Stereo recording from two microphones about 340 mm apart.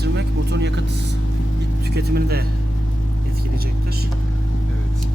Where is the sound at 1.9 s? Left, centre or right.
Right.